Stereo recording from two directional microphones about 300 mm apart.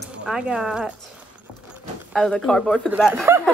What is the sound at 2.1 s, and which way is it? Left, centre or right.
Speech, centre.